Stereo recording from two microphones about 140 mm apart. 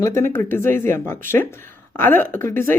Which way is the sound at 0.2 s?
15° left (ahead or behind).